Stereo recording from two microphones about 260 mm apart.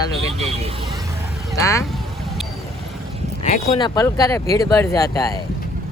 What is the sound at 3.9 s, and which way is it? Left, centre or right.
Speech, centre.